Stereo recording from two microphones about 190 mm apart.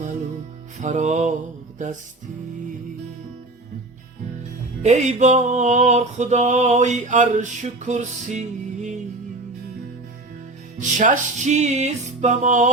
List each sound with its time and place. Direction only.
0.8 s music: 40° right (ahead or behind)
4.8 s music: 40° right (ahead or behind)
10.8 s music: 40° right (ahead or behind)